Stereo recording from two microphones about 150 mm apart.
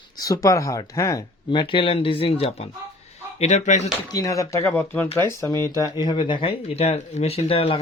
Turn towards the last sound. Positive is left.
turn(degrees=40)  # may be behind; listen again after turning